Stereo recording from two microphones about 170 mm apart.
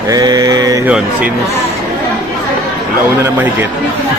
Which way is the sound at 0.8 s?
10° right (ahead or behind).